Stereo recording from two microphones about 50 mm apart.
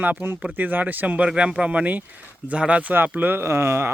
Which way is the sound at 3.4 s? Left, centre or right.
Right.